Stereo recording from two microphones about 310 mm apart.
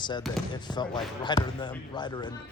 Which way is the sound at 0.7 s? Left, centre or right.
Centre.